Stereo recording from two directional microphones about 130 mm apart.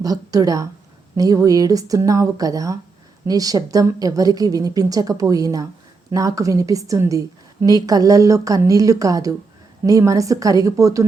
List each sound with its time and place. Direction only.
0.0 s a woman's voice: 25° right (ahead or behind)